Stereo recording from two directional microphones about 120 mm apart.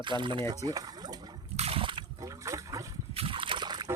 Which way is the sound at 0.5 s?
30° right (ahead or behind).